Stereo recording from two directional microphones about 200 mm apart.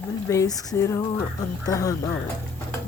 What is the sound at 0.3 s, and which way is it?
Speech, 15° left (ahead or behind).